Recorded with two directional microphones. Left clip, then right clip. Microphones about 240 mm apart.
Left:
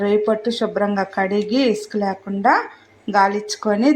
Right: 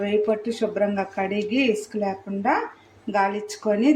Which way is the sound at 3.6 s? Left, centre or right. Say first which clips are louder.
Left 2 dB; left.